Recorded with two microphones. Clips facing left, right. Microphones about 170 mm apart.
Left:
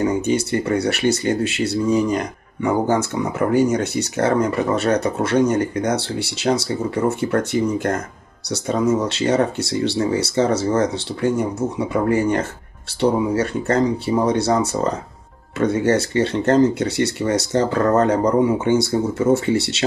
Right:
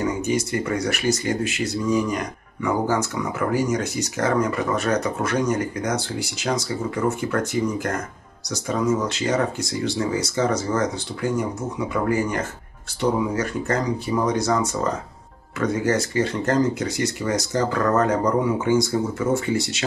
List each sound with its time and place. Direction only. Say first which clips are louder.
0.0 s speech: left 4 dB; 30° left (ahead or behind)